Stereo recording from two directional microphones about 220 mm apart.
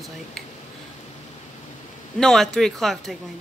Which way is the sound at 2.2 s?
5° left (ahead or behind).